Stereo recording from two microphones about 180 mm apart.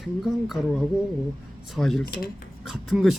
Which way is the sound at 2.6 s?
Centre (ahead or behind).